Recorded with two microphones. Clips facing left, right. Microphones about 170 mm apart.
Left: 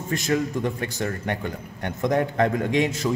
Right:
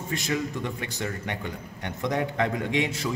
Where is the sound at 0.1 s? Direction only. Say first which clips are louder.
Left 5 dB; 45° left (ahead or behind).